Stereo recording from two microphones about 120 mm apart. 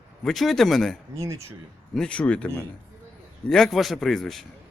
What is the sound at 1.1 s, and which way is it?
Speech, 25° right (ahead or behind).